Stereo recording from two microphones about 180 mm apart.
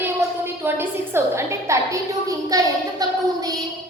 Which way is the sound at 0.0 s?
10° right (ahead or behind).